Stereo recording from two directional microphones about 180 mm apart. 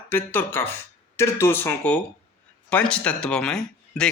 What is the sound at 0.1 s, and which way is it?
A man's voice, 10° left (ahead or behind).